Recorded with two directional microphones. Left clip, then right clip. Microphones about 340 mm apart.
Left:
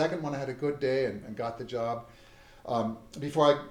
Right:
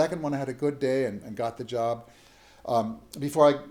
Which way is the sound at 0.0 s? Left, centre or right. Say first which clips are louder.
Right 3 dB; right.